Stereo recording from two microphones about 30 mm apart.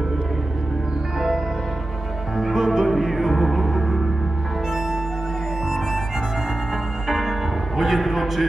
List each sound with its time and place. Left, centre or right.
2.3 s music: centre
3.3 s music: centre
7.1 s music: centre